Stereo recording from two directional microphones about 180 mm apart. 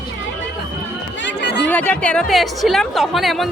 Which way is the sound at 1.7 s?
10° left (ahead or behind).